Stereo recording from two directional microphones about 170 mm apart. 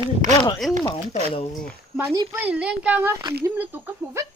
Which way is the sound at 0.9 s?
40° left (ahead or behind).